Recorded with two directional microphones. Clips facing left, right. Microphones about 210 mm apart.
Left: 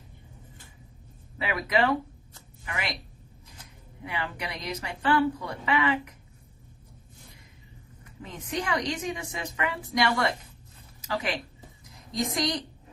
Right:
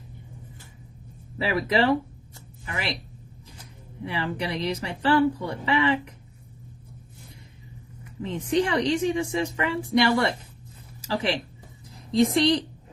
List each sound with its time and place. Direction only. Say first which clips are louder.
1.4 s speech: right 3 dB; 30° right (ahead or behind)
4.0 s speech: right 5 dB; 30° right (ahead or behind)
8.2 s speech: right 9 dB; 30° right (ahead or behind)